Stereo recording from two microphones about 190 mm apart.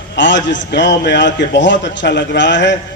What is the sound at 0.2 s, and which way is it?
A man's voice, 70° left (ahead or behind).